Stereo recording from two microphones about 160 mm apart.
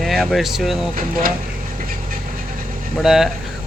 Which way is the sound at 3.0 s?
Centre (ahead or behind).